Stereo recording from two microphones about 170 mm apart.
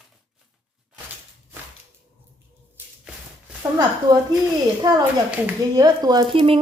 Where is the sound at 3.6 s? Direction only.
20° right (ahead or behind).